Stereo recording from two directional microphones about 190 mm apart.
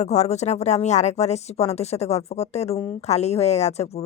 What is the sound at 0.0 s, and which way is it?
Speech, 35° left (ahead or behind).